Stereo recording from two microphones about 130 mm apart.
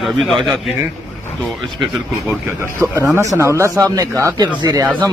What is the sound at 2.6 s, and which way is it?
Speech, 20° right (ahead or behind).